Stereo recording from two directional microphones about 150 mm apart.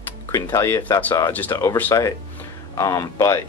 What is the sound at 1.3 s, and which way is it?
Speech, 10° left (ahead or behind).